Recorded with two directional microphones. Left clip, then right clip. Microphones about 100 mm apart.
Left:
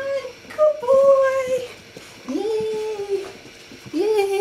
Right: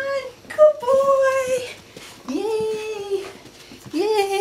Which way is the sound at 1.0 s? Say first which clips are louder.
Left 2 dB; 15° right (ahead or behind).